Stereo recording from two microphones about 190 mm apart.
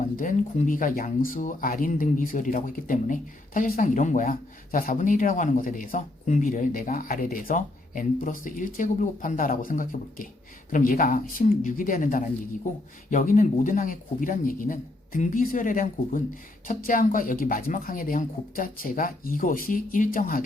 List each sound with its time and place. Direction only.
0.2 s speech: 45° left (ahead or behind)